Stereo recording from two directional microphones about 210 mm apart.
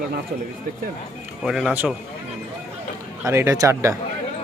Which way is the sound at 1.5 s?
Centre (ahead or behind).